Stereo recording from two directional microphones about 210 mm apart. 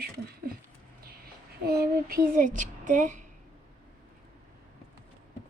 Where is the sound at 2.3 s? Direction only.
40° right (ahead or behind).